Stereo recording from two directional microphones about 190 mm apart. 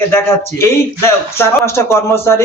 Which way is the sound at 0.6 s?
15° left (ahead or behind).